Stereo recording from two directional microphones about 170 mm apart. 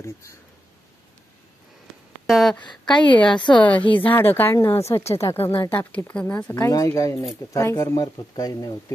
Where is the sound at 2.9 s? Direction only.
25° left (ahead or behind).